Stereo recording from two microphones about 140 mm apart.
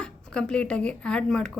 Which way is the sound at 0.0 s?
5° left (ahead or behind).